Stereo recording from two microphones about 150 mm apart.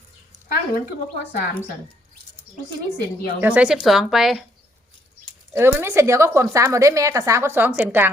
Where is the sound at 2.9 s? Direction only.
90° left.